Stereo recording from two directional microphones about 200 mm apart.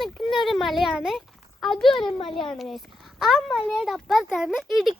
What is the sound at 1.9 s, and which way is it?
Speech, 25° left (ahead or behind).